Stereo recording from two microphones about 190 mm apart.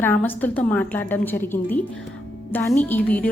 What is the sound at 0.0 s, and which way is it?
A woman's voice, 10° left (ahead or behind).